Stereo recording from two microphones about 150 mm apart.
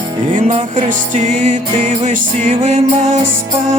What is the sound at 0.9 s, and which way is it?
Music, 60° right (ahead or behind).